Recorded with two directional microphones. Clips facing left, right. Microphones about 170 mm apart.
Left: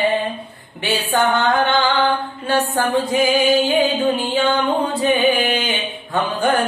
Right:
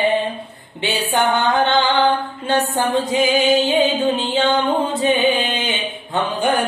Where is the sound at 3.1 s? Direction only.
20° right (ahead or behind).